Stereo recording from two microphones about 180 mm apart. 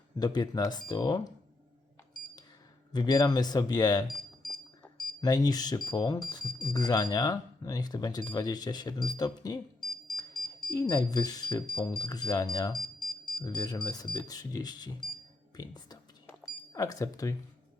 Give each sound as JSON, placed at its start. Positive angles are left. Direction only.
{"t": 0.2, "sound": "speech", "side_deg": 20}
{"t": 2.9, "sound": "speech", "side_deg": 20}
{"t": 5.2, "sound": "speech", "side_deg": 20}
{"t": 9.8, "sound": "smoke detector", "side_deg": 5}
{"t": 10.7, "sound": "speech", "side_deg": 20}
{"t": 12.8, "sound": "smoke detector", "side_deg": 5}
{"t": 13.4, "sound": "speech", "side_deg": 20}